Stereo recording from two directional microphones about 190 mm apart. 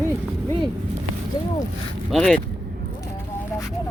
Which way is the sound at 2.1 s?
Centre (ahead or behind).